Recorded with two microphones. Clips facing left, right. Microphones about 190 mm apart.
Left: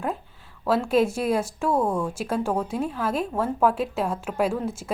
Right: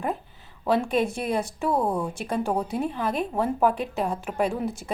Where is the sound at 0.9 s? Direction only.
Centre (ahead or behind).